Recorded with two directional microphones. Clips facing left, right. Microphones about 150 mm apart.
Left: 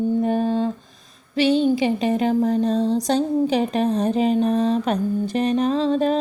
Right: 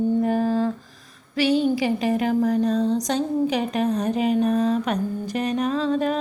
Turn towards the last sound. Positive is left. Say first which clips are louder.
# left 3 dB
turn(degrees=30)  # may be behind; listen again after turning